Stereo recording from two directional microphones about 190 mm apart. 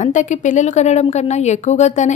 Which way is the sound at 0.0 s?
40° left (ahead or behind).